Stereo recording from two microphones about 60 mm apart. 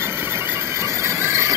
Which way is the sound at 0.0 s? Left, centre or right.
Right.